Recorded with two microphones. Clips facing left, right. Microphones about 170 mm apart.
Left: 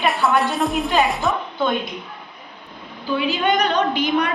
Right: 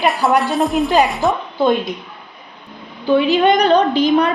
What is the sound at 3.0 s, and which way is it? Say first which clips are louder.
A woman's voice: right 8 dB; 40° right (ahead or behind).